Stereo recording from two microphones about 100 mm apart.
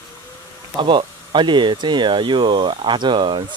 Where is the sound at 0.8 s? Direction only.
60° right (ahead or behind).